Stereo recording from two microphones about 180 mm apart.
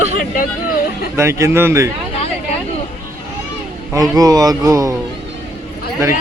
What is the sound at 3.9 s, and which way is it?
Speech, 20° right (ahead or behind).